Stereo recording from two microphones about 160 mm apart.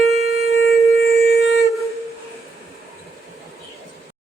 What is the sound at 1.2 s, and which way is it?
Shofar, 90° left.